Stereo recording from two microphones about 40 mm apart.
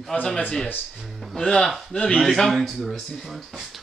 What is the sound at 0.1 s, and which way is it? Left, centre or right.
Speech, left.